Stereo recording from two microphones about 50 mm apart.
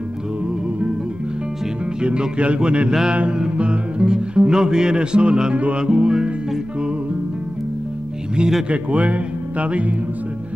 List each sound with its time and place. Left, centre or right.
2.0 s speech: right
2.9 s mantra: centre
3.2 s music: centre
8.4 s mantra: centre
8.6 s speech: right